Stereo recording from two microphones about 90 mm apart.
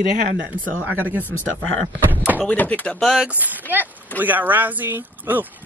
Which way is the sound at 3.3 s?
20° right (ahead or behind).